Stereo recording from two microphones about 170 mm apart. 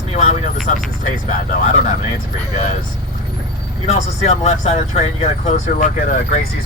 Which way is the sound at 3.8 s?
40° left (ahead or behind).